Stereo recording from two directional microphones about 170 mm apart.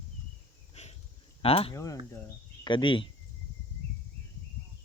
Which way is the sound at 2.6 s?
30° left (ahead or behind).